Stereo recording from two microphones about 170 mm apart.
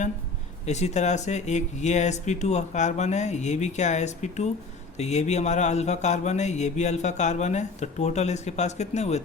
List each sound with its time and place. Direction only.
0.6 s speech: 40° left (ahead or behind)
4.9 s mantra: 40° left (ahead or behind)